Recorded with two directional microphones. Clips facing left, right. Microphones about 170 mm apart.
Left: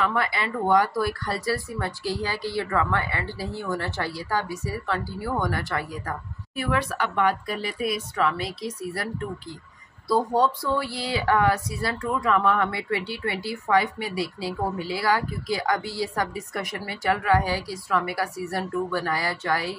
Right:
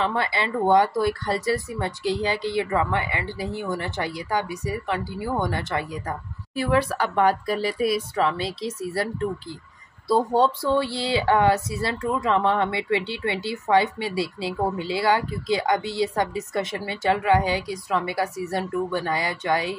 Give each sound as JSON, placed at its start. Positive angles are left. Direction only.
{"t": 0.0, "sound": "speech", "side_deg": -25}